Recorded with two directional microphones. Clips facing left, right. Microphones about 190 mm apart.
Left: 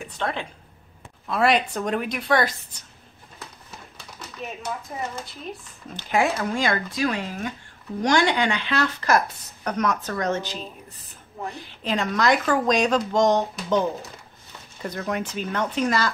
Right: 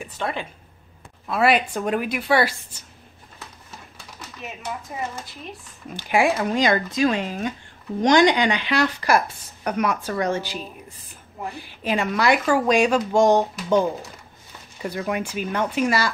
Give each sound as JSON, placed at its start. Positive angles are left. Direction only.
{"t": 0.0, "sound": "speech", "side_deg": -5}
{"t": 5.9, "sound": "speech", "side_deg": -10}